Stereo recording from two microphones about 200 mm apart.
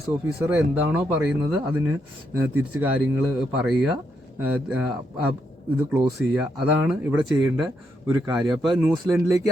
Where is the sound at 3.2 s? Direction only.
Centre (ahead or behind).